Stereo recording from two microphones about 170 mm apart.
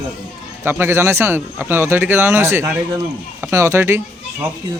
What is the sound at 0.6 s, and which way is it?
Speech, 15° right (ahead or behind).